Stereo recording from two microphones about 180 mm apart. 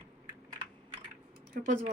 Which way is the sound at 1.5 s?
45° right (ahead or behind).